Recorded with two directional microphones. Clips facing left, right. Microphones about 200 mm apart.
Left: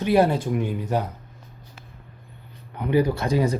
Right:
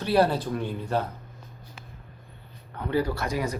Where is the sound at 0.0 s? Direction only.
20° left (ahead or behind).